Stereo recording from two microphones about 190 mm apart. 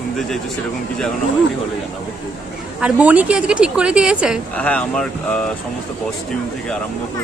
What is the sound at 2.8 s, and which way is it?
A woman's voice, 5° right (ahead or behind).